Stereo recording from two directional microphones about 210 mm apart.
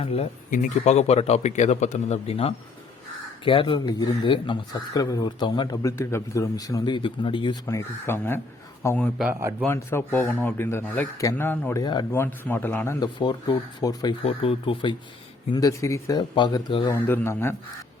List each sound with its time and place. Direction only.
0.0 s speech: 30° left (ahead or behind); by 9.6 s 10° right (ahead or behind)
9.6 s speech: 10° left (ahead or behind)
13.1 s speech: 20° left (ahead or behind)
16.9 s speech: 10° left (ahead or behind)